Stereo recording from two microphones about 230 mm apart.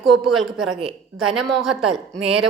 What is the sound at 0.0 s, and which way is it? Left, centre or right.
A woman's voice, centre.